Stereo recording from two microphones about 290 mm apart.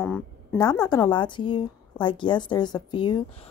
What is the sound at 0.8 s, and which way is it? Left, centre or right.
A woman's voice, centre.